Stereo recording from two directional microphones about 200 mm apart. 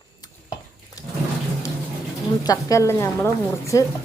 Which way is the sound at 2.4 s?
20° left (ahead or behind).